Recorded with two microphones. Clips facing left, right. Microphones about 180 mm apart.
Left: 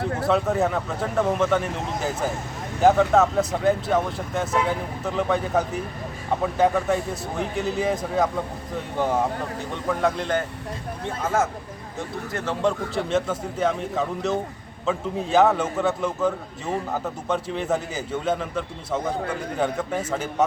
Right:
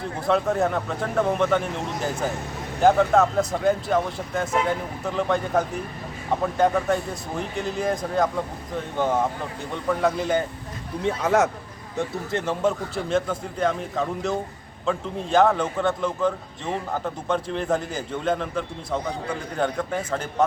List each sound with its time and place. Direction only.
0.3 s a man's voice: centre (ahead or behind)
11.0 s speech: 70° right (ahead or behind)
12.5 s a man's voice: centre (ahead or behind)